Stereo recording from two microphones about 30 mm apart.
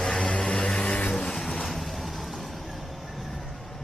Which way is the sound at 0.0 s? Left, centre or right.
Left.